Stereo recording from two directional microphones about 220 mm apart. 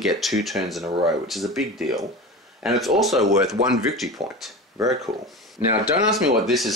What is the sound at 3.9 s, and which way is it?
Speech, centre (ahead or behind).